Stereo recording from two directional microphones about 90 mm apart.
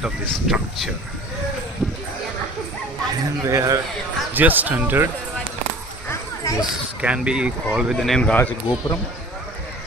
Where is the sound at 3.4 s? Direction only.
35° right (ahead or behind).